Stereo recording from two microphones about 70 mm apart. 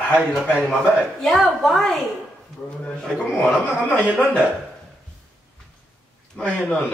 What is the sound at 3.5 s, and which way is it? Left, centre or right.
Speech, centre.